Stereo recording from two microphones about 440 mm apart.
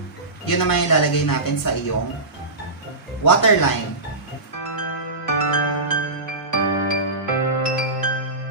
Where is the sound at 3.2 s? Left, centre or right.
Left.